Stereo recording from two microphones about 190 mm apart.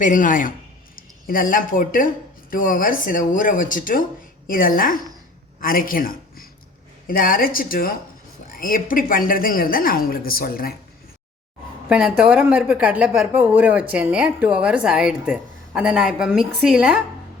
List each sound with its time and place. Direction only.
0.0 s a woman's voice: 45° left (ahead or behind)
11.9 s speech: 5° right (ahead or behind)